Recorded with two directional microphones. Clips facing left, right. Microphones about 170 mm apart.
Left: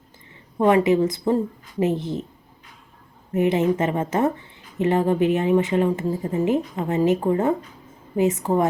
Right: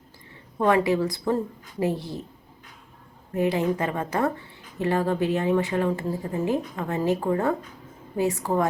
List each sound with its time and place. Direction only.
0.6 s speech: 20° left (ahead or behind)
3.3 s speech: 20° left (ahead or behind)